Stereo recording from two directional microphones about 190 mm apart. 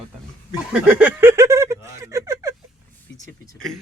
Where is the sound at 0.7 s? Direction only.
5° right (ahead or behind).